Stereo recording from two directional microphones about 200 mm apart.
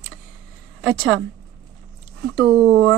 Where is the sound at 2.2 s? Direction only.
60° right (ahead or behind).